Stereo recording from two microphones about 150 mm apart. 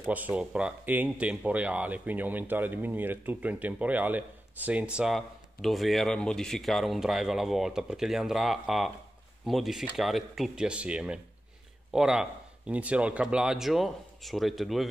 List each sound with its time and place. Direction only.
0.0 s a man's voice: 10° right (ahead or behind)